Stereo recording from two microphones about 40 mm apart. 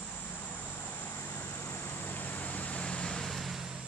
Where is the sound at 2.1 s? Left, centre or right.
Left.